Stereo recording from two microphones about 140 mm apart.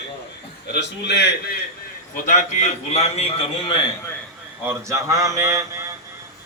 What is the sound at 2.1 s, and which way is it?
A man's voice, 60° left (ahead or behind).